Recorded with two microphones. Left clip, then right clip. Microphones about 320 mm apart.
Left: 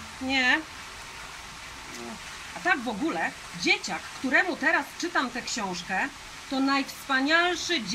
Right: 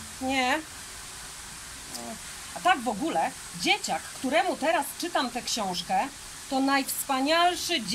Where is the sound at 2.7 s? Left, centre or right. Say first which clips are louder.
Right 1 dB; centre.